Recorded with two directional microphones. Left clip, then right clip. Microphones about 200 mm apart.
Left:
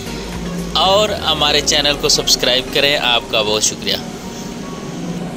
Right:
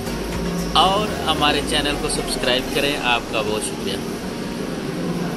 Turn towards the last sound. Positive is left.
turn(degrees=35)  # may be behind; listen again after turning